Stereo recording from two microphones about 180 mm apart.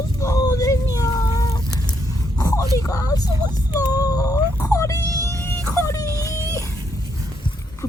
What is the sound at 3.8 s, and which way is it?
Whimper, 20° left (ahead or behind).